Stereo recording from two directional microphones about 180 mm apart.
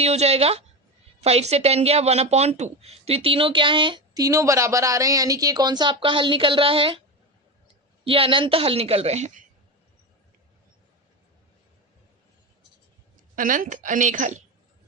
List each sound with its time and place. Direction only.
0.0 s a woman's voice: 35° right (ahead or behind)
8.0 s a woman's voice: 30° right (ahead or behind)
13.3 s a woman's voice: 50° right (ahead or behind)